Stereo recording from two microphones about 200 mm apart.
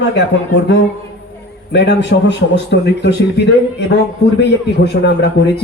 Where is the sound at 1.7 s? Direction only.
60° left (ahead or behind).